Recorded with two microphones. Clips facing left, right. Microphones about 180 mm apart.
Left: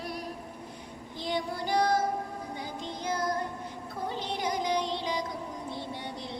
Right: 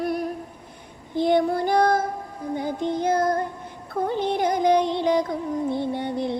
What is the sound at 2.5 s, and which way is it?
Music, 55° right (ahead or behind).